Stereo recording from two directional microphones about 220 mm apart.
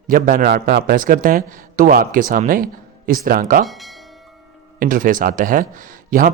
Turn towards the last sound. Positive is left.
turn(degrees=-40)  # may be behind; listen again after turning